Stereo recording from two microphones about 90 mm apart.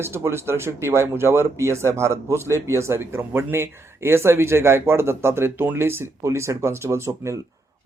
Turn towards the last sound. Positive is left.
turn(degrees=-30)  # may be behind; listen again after turning